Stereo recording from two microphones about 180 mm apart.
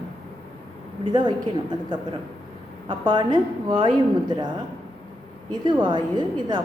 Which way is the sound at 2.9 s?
25° right (ahead or behind).